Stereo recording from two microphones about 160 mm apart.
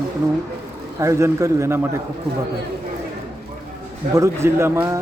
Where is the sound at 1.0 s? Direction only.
20° right (ahead or behind).